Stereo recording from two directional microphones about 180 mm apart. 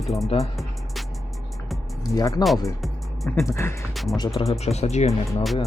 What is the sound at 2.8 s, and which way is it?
Music, centre (ahead or behind).